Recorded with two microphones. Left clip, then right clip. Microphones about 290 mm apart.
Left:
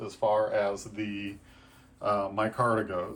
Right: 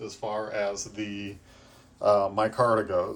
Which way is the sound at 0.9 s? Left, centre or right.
Centre.